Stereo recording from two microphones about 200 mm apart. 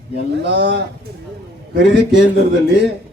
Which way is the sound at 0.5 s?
60° right (ahead or behind).